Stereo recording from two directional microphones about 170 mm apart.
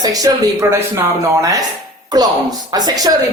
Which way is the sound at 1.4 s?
20° right (ahead or behind).